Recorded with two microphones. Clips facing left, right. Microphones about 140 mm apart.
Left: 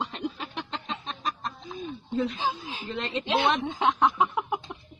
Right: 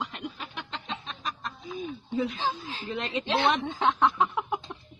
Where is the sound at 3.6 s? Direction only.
15° left (ahead or behind).